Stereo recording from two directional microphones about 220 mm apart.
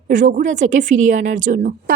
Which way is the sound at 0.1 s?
35° right (ahead or behind).